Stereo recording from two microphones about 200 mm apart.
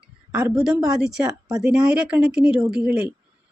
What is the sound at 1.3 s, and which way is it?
Speech, 15° right (ahead or behind).